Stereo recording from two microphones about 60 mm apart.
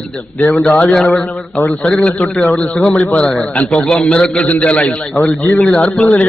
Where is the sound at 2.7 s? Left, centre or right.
Centre.